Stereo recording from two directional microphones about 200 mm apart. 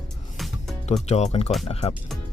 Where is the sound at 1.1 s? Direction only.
35° left (ahead or behind).